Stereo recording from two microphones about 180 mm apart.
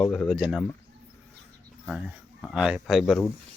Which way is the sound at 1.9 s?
10° right (ahead or behind).